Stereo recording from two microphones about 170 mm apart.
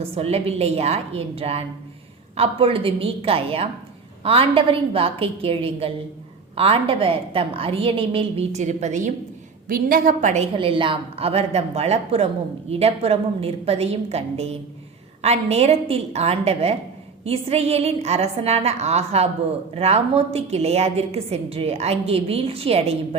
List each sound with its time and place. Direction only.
0.0 s a woman's voice: 35° right (ahead or behind)
9.6 s a woman's voice: 55° right (ahead or behind); by 23.0 s 35° right (ahead or behind)